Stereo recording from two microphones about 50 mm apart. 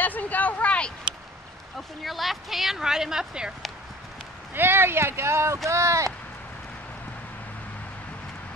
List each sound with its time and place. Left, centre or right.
0.0 s a sound: left
2.0 s speech: centre
4.6 s speech: right
5.7 s speech: right